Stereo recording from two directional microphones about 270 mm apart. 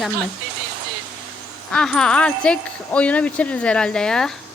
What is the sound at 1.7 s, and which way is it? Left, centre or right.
Speech, centre.